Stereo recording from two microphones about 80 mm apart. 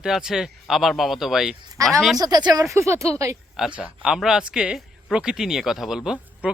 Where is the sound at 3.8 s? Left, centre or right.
Centre.